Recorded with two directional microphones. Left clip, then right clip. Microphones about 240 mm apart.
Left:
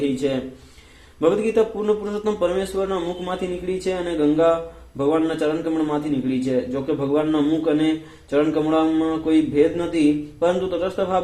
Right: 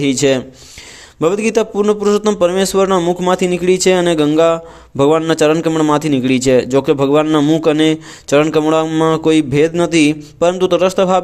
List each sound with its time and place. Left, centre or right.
0.2 s a man's voice: right